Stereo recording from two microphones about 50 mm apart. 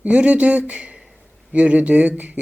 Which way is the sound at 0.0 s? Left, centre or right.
Right.